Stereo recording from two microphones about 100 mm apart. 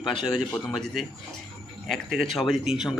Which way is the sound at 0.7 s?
Centre (ahead or behind).